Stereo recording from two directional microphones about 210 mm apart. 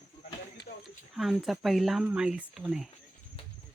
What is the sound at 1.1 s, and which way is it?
Speech, centre (ahead or behind).